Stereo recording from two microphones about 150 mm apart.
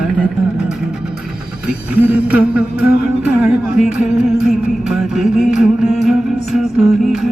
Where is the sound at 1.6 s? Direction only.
10° right (ahead or behind).